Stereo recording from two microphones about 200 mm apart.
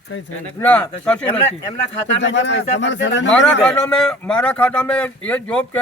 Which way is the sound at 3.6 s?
5° left (ahead or behind).